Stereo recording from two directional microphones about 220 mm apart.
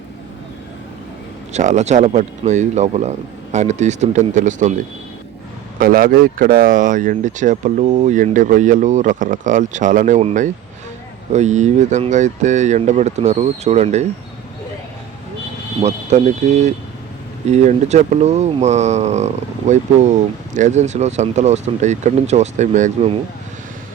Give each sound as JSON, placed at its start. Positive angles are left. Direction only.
{"t": 1.5, "sound": "speech", "side_deg": -30}
{"t": 5.8, "sound": "speech", "side_deg": -40}
{"t": 15.8, "sound": "speech", "side_deg": -30}